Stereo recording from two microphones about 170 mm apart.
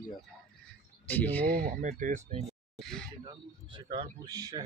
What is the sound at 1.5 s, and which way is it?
Speech, 60° right (ahead or behind).